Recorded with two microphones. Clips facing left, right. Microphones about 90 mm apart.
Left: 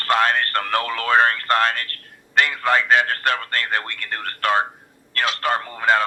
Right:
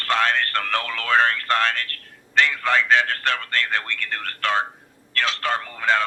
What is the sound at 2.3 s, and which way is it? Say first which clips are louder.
A man's voice: left 1 dB; 10° left (ahead or behind).